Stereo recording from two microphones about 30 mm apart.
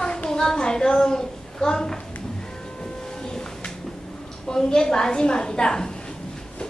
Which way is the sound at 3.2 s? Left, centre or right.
Left.